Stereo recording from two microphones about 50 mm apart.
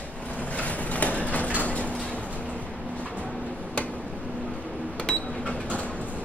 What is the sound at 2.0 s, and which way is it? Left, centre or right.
Vehicle, left.